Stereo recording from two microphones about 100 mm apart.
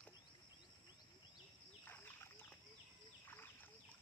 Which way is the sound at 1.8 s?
20° left (ahead or behind).